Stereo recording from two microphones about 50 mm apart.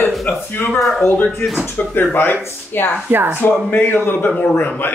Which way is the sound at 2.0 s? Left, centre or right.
Left.